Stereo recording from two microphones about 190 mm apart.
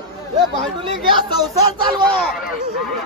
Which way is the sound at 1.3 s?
20° right (ahead or behind).